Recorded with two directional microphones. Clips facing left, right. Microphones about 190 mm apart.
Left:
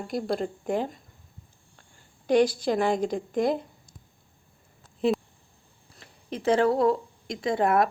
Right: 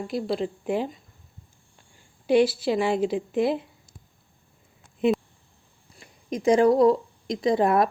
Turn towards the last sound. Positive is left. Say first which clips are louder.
# right 2 dB
turn(degrees=-25)  # may be behind; listen again after turning